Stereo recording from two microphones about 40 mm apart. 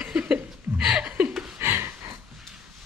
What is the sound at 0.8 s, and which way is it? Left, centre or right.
Chuckle, centre.